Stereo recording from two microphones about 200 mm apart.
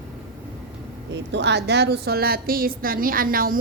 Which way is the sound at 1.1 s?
60° right (ahead or behind).